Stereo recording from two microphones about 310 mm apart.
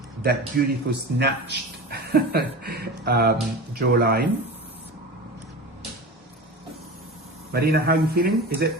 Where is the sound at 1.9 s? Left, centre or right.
Right.